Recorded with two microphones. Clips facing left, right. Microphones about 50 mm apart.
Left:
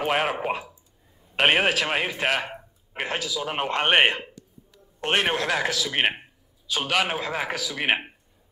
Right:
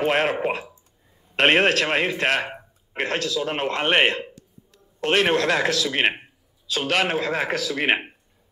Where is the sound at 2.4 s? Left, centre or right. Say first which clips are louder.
Right 3 dB; centre.